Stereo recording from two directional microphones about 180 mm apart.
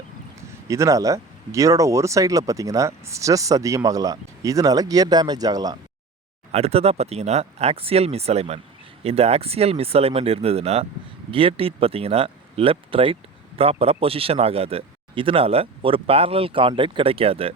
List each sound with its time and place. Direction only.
0.7 s speech: 15° right (ahead or behind)
6.5 s speech: 35° right (ahead or behind)